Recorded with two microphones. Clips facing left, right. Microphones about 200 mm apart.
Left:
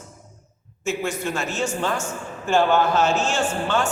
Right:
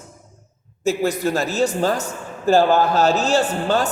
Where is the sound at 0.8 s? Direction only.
35° right (ahead or behind).